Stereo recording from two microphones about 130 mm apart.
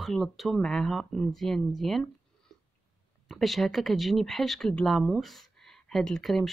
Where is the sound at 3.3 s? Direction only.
Centre (ahead or behind).